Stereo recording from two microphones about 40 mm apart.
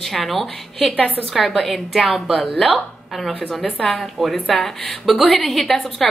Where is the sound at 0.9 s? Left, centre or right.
Left.